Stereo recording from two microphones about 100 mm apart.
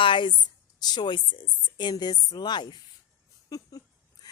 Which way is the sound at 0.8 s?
45° left (ahead or behind).